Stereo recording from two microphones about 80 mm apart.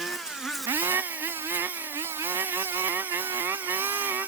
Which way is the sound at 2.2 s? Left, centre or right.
Right.